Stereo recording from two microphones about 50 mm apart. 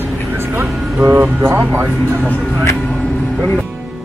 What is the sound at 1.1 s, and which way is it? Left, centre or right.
Speech, right.